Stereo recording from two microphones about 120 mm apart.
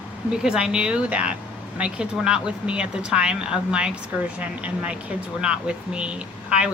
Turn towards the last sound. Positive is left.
turn(degrees=-10)  # may be behind; listen again after turning